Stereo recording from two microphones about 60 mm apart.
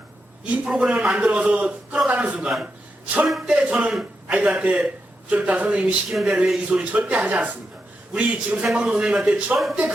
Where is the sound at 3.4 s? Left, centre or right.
Centre.